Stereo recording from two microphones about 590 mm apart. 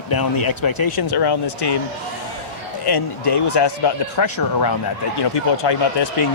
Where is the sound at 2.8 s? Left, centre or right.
Left.